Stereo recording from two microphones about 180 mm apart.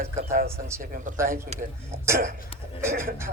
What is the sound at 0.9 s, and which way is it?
Speech, 45° right (ahead or behind).